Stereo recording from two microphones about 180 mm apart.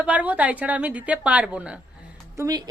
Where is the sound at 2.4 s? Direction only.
20° right (ahead or behind).